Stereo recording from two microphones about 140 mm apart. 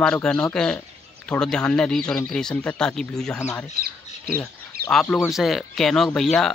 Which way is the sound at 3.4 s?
20° left (ahead or behind).